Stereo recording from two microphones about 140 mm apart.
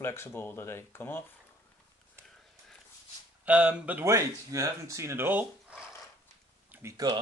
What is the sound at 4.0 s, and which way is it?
Speech, 20° right (ahead or behind).